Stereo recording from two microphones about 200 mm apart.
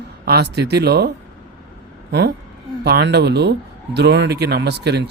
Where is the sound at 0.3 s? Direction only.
55° right (ahead or behind).